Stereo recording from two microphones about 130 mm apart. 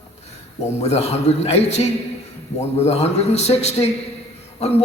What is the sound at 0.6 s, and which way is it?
A man's voice, 55° left (ahead or behind).